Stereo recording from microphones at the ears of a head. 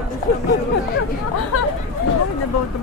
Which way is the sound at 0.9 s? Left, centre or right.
Left.